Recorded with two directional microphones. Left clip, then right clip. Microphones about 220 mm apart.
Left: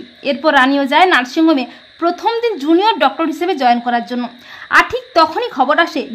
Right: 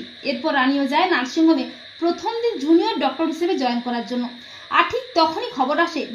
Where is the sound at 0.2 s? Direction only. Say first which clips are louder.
Left 8 dB; 30° left (ahead or behind).